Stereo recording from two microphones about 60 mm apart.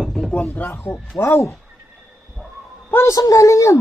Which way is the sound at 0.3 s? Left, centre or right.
Left.